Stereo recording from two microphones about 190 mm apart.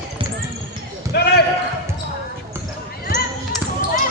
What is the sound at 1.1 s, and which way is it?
Basketball bounce, 60° left (ahead or behind).